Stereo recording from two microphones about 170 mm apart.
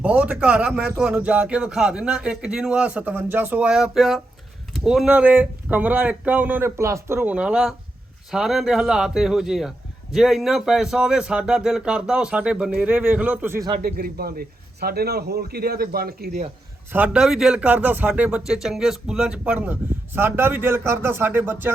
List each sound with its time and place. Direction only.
0.0 s speech: 10° right (ahead or behind)
13.7 s a man's voice: 60° right (ahead or behind)
16.9 s speech: 10° right (ahead or behind)